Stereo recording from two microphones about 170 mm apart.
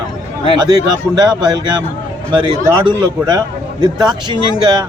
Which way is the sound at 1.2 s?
25° right (ahead or behind).